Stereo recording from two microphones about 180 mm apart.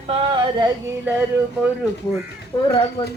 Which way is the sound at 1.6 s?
10° right (ahead or behind).